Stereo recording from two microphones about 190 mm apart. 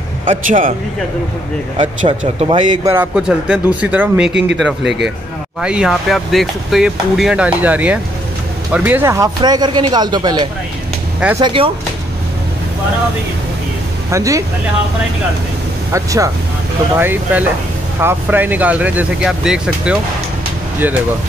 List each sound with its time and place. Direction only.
0.2 s a man's voice: 45° right (ahead or behind)
2.0 s speech: 25° right (ahead or behind)
2.9 s speech: 5° right (ahead or behind)
4.3 s speech: 65° right (ahead or behind)
5.6 s speech: 5° right (ahead or behind); by 10.5 s 20° right (ahead or behind)
11.1 s speech: 5° right (ahead or behind)
11.4 s speech: 25° right (ahead or behind)
14.1 s speech: 15° right (ahead or behind)
15.9 s speech: 15° right (ahead or behind)